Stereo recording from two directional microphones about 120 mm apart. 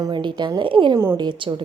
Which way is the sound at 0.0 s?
40° right (ahead or behind).